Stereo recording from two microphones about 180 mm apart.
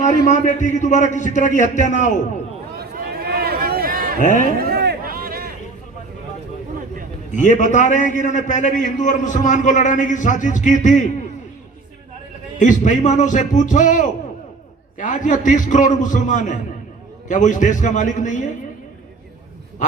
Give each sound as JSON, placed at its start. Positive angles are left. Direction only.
{"t": 0.3, "sound": "a man's voice", "side_deg": 45}
{"t": 2.7, "sound": "a sound", "side_deg": -60}
{"t": 4.2, "sound": "a man's voice", "side_deg": 45}
{"t": 4.5, "sound": "a sound", "side_deg": -60}
{"t": 7.3, "sound": "a man's voice", "side_deg": 45}
{"t": 12.5, "sound": "a man's voice", "side_deg": 45}